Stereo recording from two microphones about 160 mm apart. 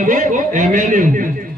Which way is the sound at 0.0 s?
55° right (ahead or behind).